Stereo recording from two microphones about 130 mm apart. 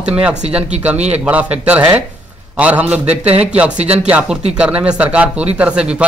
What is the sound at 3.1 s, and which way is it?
Speech, 50° right (ahead or behind).